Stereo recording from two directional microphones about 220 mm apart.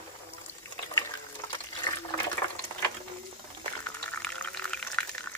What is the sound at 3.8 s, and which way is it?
Water, 5° left (ahead or behind).